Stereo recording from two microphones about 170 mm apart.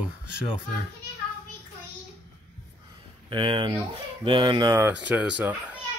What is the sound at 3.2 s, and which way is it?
Speech, 30° right (ahead or behind).